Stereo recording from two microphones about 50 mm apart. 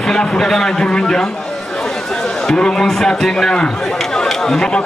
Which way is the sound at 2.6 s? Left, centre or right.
Centre.